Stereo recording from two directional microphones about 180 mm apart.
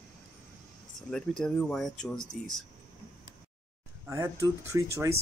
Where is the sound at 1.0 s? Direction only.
5° left (ahead or behind).